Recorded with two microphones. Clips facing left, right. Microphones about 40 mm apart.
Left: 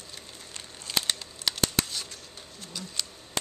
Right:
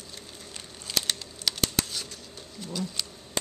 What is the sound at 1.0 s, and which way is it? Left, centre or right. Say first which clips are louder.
Computer keyboard: even; centre.